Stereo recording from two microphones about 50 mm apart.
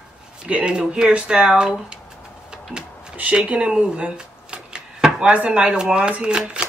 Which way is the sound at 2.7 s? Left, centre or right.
Right.